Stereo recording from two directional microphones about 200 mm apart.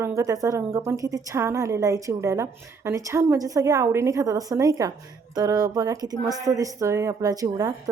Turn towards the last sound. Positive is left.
turn(degrees=-20)  # may be behind; listen again after turning